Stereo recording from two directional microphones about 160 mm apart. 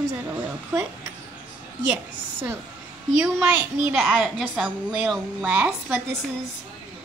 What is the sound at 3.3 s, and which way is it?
A woman's voice, 5° right (ahead or behind).